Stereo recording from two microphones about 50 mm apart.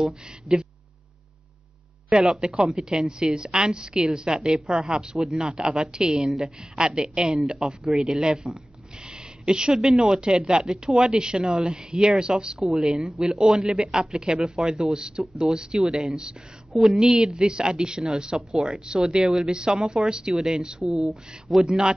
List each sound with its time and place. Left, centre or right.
2.0 s speech: centre
16.8 s speech: centre